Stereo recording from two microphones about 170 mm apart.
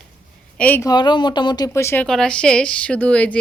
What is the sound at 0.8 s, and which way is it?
Speech, 25° left (ahead or behind).